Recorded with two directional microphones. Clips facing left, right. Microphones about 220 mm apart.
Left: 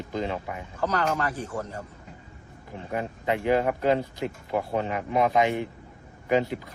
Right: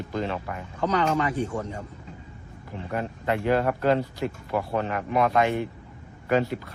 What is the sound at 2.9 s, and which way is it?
Speech, 15° left (ahead or behind).